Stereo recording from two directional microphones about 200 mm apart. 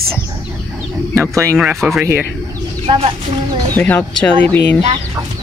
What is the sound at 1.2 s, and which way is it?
Speech, 15° right (ahead or behind).